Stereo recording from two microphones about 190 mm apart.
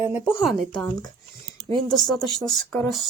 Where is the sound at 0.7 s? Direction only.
20° left (ahead or behind).